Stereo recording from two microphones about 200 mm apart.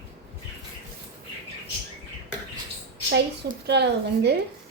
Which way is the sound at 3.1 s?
55° right (ahead or behind).